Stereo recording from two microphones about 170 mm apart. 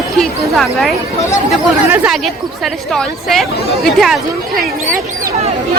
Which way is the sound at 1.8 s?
10° right (ahead or behind).